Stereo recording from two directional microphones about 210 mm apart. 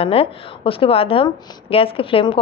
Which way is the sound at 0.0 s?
25° left (ahead or behind).